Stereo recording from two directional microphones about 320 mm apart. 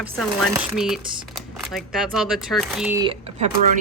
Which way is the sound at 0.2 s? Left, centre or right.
Centre.